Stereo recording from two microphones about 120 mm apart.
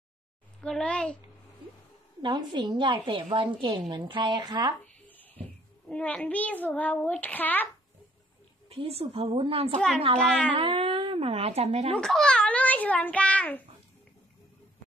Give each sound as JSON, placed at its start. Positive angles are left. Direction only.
{"t": 0.6, "sound": "a child's voice", "side_deg": 5}
{"t": 2.2, "sound": "a woman's voice", "side_deg": -40}
{"t": 5.0, "sound": "a child's voice", "side_deg": 15}
{"t": 8.6, "sound": "a woman's voice", "side_deg": -55}
{"t": 10.2, "sound": "a child's voice", "side_deg": 10}
{"t": 10.5, "sound": "speech", "side_deg": -50}
{"t": 11.9, "sound": "a child's voice", "side_deg": 5}